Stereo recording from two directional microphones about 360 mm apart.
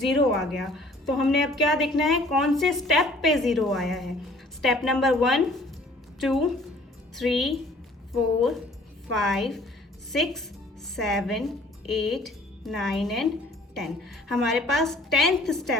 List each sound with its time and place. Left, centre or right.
0.0 s a woman's voice: centre